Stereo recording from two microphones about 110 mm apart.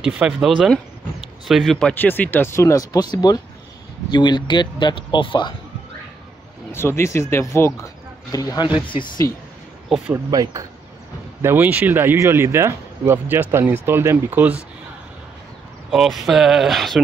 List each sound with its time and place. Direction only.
0.0 s speech: 10° right (ahead or behind)
1.5 s speech: centre (ahead or behind); by 5.5 s 45° left (ahead or behind)
6.7 s speech: 25° left (ahead or behind)
8.7 s speech: 50° left (ahead or behind)
9.8 s speech: 5° right (ahead or behind)
10.1 s speech: 30° right (ahead or behind)
11.4 s speech: 15° right (ahead or behind)
15.9 s speech: centre (ahead or behind)